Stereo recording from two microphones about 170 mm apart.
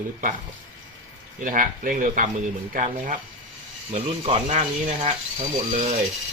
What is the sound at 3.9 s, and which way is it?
Speech, 35° right (ahead or behind).